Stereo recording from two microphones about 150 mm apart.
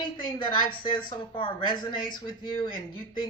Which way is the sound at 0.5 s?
30° left (ahead or behind).